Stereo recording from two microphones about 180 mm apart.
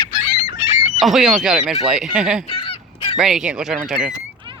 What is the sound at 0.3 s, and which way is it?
Fowl, 30° left (ahead or behind).